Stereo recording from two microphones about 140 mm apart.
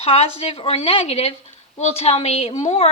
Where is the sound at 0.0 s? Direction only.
45° left (ahead or behind).